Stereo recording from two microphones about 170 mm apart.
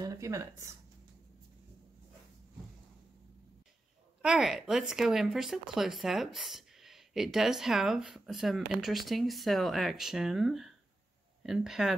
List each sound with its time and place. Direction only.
0.0 s speech: 20° right (ahead or behind)
4.2 s speech: centre (ahead or behind)